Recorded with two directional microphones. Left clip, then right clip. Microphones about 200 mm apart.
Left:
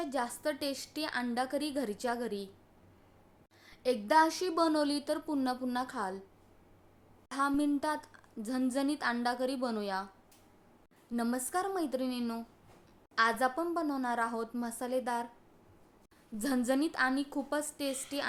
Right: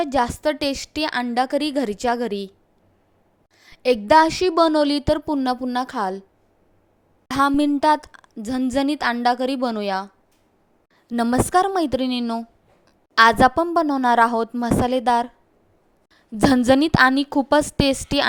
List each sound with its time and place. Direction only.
0.0 s speech: 40° right (ahead or behind)
3.6 s speech: 35° right (ahead or behind)
7.3 s speech: 40° right (ahead or behind)
11.1 s speech: 40° right (ahead or behind)
16.4 s a woman's voice: 45° right (ahead or behind)